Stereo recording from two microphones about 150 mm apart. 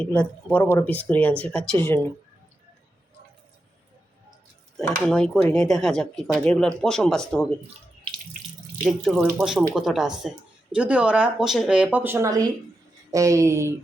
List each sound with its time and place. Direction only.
0.0 s speech: 10° left (ahead or behind)
4.8 s speech: 5° left (ahead or behind)
8.8 s speech: centre (ahead or behind); by 13.7 s 20° right (ahead or behind)